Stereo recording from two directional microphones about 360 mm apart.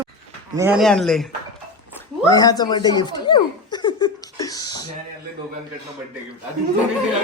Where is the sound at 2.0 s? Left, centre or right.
Centre.